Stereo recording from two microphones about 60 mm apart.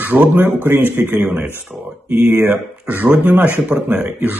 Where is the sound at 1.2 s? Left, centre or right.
Centre.